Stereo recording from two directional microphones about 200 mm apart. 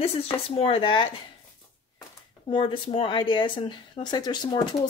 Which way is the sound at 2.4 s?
25° left (ahead or behind).